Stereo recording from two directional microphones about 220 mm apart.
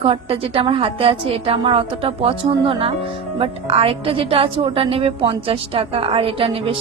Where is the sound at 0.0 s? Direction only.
25° right (ahead or behind).